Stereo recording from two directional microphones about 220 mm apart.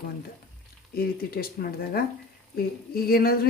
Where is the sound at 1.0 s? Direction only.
45° left (ahead or behind).